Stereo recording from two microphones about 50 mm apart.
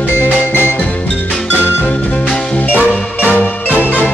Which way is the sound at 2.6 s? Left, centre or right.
Left.